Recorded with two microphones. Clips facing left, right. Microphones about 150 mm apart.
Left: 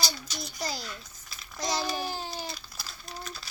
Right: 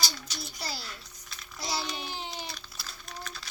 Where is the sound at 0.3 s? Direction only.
45° left (ahead or behind).